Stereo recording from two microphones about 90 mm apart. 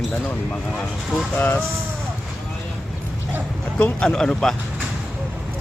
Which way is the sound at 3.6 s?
15° left (ahead or behind).